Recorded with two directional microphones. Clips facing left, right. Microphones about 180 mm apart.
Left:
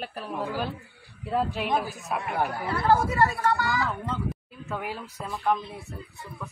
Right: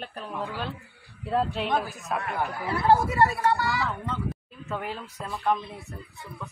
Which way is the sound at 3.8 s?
Centre (ahead or behind).